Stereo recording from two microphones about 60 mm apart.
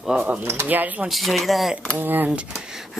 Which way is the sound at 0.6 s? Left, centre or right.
Right.